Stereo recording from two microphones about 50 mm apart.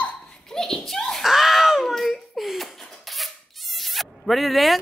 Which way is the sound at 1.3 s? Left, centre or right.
Centre.